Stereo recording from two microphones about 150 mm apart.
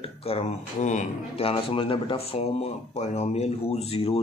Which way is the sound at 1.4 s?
40° left (ahead or behind).